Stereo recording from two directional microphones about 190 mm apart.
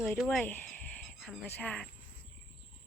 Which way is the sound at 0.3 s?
10° left (ahead or behind).